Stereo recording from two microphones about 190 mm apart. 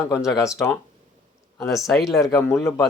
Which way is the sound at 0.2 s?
5° right (ahead or behind).